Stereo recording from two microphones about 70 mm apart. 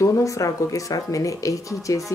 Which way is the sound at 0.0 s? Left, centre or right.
Left.